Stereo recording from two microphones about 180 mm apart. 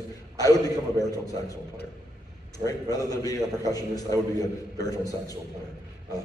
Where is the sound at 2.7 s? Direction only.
20° left (ahead or behind).